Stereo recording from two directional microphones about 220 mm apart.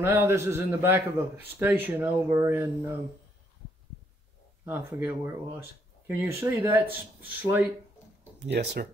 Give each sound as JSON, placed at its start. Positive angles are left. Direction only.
{"t": 0.0, "sound": "speech", "side_deg": -10}
{"t": 4.6, "sound": "speech", "side_deg": -10}
{"t": 8.4, "sound": "speech", "side_deg": -50}